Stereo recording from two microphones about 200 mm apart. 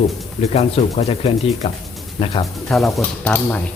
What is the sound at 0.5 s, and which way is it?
Speech, 30° left (ahead or behind).